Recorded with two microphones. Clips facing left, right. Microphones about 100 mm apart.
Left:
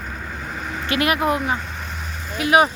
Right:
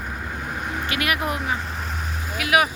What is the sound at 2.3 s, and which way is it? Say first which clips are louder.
Speech: left 4 dB; 30° left (ahead or behind).